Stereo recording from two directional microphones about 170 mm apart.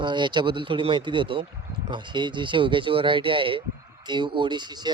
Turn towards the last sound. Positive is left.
turn(degrees=-25)  # may be behind; listen again after turning